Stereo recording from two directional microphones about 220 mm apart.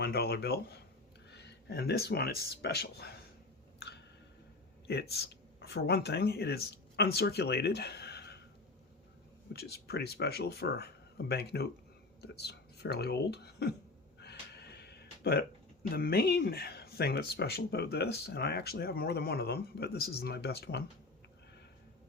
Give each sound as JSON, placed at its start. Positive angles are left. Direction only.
{"t": 0.0, "sound": "speech", "side_deg": 45}
{"t": 3.8, "sound": "a sound", "side_deg": 50}
{"t": 4.9, "sound": "speech", "side_deg": 45}
{"t": 9.5, "sound": "speech", "side_deg": 45}
{"t": 14.2, "sound": "a sound", "side_deg": 50}
{"t": 16.0, "sound": "speech", "side_deg": 45}